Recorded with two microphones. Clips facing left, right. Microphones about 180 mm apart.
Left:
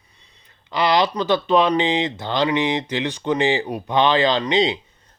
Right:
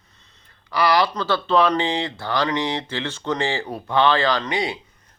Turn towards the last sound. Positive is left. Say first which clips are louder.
# left 4 dB
turn(degrees=20)  # may be behind; listen again after turning